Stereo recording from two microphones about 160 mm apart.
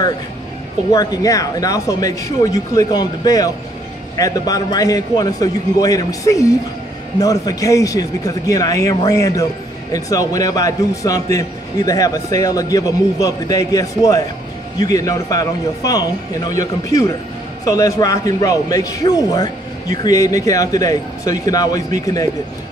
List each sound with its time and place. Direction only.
0.9 s a man's voice: 20° left (ahead or behind)